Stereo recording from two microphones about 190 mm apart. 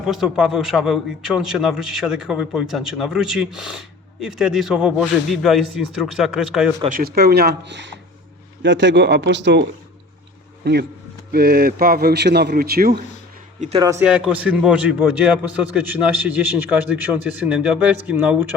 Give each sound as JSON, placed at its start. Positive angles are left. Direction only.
{"t": 0.0, "sound": "a man's voice", "side_deg": 0}
{"t": 6.8, "sound": "a man's voice", "side_deg": -50}
{"t": 13.7, "sound": "a man's voice", "side_deg": -20}
{"t": 14.0, "sound": "a man's voice", "side_deg": -5}